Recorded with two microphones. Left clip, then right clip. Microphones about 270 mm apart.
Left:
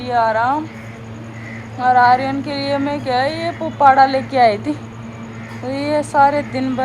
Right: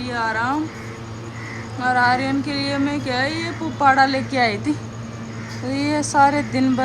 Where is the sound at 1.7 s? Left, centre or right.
Centre.